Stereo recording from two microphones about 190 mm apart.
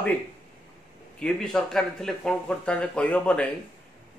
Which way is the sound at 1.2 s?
5° left (ahead or behind).